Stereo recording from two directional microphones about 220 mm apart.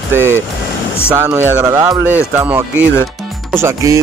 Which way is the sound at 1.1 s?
10° right (ahead or behind).